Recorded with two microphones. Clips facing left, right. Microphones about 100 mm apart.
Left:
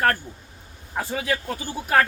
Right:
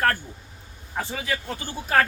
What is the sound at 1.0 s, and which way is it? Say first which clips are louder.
Speech: left 3 dB; 5° left (ahead or behind).